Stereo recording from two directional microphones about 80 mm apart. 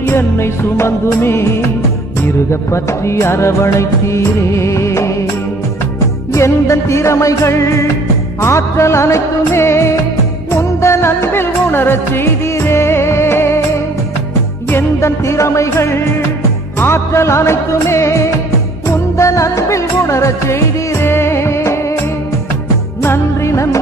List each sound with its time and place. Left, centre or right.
0.0 s music: left
6.3 s music: left
10.5 s music of bollywood: left
14.7 s music: left
18.9 s music of bollywood: left
23.0 s music: left